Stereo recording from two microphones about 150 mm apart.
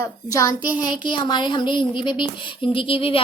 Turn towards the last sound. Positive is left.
turn(degrees=35)  # may be behind; listen again after turning